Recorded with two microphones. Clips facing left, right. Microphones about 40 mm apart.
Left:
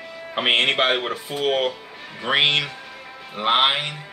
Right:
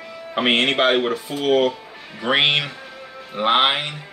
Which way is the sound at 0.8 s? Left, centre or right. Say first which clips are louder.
Right 3 dB; centre.